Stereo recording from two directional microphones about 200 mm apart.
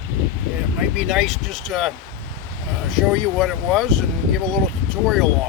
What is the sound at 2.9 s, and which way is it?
Speech, centre (ahead or behind).